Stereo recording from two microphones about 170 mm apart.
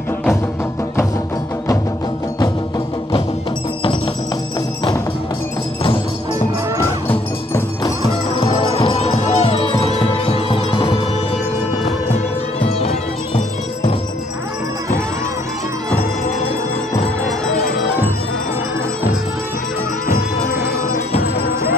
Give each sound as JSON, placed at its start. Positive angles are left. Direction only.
{"t": 8.4, "sound": "music", "side_deg": 35}
{"t": 12.5, "sound": "music", "side_deg": 35}
{"t": 21.2, "sound": "music", "side_deg": 65}